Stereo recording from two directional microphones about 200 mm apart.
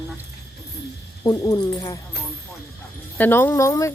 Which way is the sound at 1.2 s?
20° left (ahead or behind).